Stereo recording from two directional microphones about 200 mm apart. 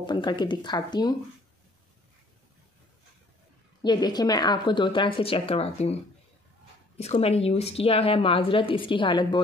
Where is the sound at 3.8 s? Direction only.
20° left (ahead or behind).